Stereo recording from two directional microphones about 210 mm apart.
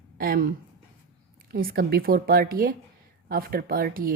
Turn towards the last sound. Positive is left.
turn(degrees=-45)  # may be behind; listen again after turning